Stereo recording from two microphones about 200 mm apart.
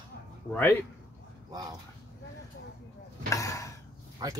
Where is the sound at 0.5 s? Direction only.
10° left (ahead or behind).